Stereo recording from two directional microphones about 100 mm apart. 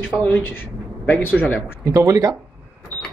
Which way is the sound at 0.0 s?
15° left (ahead or behind).